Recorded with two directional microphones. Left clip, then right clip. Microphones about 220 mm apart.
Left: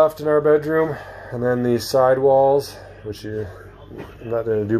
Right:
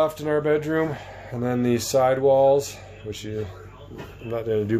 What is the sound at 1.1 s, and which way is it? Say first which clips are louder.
Speech: left 6 dB; 20° right (ahead or behind).